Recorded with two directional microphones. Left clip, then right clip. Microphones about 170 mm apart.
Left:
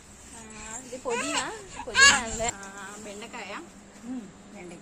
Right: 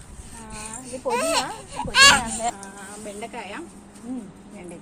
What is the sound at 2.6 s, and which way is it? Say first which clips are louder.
Speech: right 3 dB; centre (ahead or behind).